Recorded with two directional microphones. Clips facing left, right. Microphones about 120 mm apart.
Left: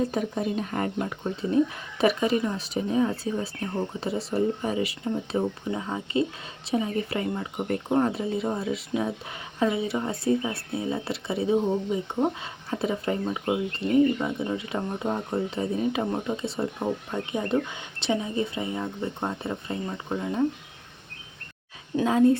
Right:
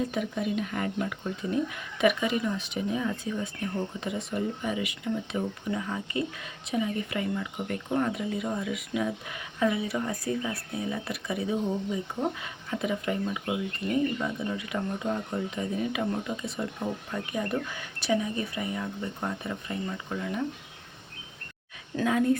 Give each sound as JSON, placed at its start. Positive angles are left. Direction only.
{"t": 0.1, "sound": "speech", "side_deg": 35}
{"t": 21.9, "sound": "speech", "side_deg": 30}